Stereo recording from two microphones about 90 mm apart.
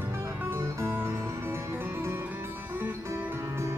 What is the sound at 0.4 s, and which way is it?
Music, 25° right (ahead or behind).